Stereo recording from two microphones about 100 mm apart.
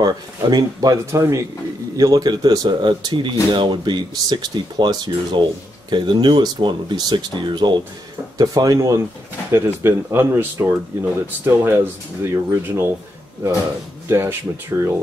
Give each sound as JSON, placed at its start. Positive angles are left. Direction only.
{"t": 0.0, "sound": "speech", "side_deg": -45}
{"t": 8.4, "sound": "speech", "side_deg": -35}
{"t": 14.0, "sound": "speech", "side_deg": -25}